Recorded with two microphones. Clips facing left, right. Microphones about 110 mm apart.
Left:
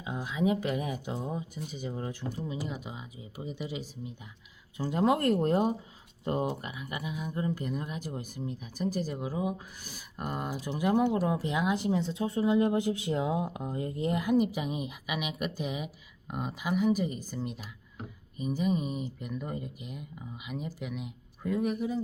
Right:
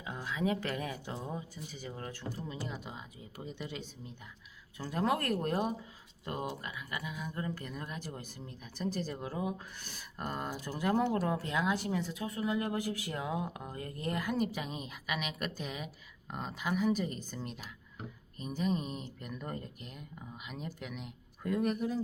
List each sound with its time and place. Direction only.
0.0 s speech: 20° left (ahead or behind)
4.8 s speech: 20° left (ahead or behind); by 22.0 s 5° left (ahead or behind)